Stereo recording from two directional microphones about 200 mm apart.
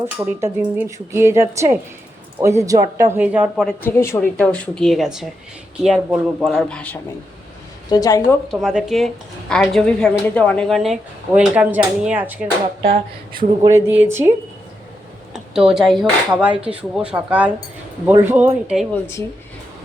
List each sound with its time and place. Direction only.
0.0 s speech: 10° right (ahead or behind)
3.8 s a woman's voice: 10° left (ahead or behind)
7.9 s a woman's voice: 20° left (ahead or behind)
8.4 s a woman's voice: centre (ahead or behind)
13.6 s speech: 15° right (ahead or behind)